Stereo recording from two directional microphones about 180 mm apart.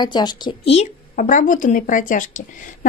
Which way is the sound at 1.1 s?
45° left (ahead or behind).